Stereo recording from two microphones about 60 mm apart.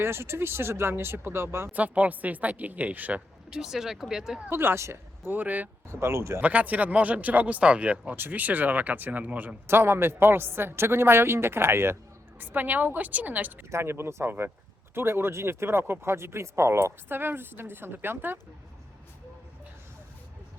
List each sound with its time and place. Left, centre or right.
0.0 s speech: right
1.7 s speech: right
3.5 s speech: centre
4.4 s speech: right
5.2 s speech: right
5.9 s speech: right
6.4 s speech: right
9.6 s speech: right
12.4 s speech: right
13.7 s speech: right